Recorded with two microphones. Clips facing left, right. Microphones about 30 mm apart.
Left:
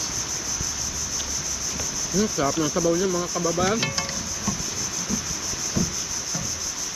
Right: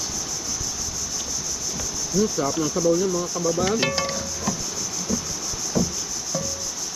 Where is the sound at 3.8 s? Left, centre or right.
Centre.